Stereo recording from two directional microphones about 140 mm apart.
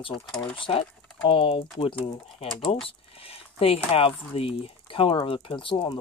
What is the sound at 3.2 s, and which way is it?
Speech, 45° left (ahead or behind).